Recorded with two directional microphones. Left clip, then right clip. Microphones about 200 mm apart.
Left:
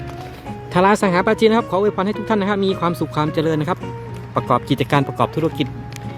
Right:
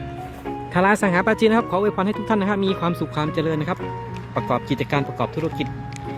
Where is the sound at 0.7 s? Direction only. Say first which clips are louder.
Left 3 dB; 15° left (ahead or behind).